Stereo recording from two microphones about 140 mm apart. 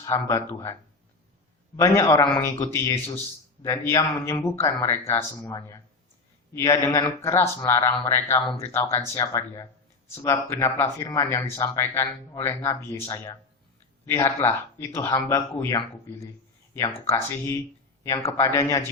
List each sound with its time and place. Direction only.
0.0 s speech: 20° left (ahead or behind)
14.3 s speech: 20° left (ahead or behind)
16.7 s speech: 20° left (ahead or behind)